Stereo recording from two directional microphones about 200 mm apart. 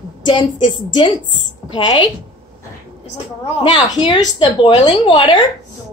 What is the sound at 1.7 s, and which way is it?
Speech, 25° left (ahead or behind).